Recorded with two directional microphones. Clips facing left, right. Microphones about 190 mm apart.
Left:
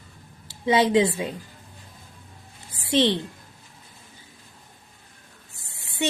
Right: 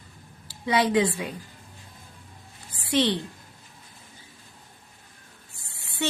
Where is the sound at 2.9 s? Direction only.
25° left (ahead or behind).